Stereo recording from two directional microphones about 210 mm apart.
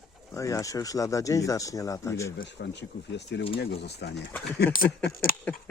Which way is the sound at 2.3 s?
55° left (ahead or behind).